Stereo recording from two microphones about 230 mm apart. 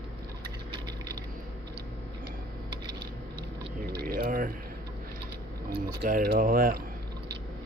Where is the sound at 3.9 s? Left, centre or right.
Right.